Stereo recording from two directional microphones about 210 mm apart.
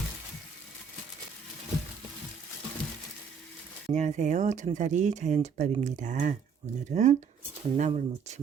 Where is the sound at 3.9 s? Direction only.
35° right (ahead or behind).